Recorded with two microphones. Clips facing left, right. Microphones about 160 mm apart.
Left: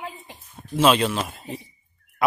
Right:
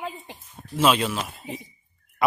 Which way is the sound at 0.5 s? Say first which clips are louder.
Left 2 dB; centre (ahead or behind).